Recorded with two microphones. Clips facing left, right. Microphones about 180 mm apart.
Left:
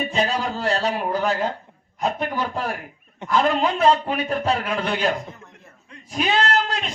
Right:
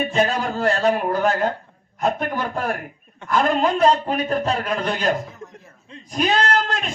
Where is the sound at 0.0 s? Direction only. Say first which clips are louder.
Right 3 dB; 50° right (ahead or behind).